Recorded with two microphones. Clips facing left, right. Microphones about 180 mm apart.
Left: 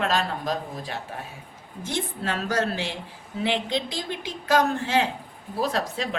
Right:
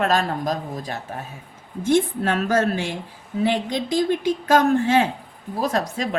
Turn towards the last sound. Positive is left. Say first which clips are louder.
# right 4 dB
turn(degrees=-45)  # may be behind; listen again after turning